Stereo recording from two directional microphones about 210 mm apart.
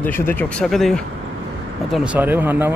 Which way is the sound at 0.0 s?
10° left (ahead or behind).